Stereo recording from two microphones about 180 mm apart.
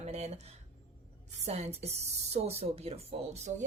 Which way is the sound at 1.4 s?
35° right (ahead or behind).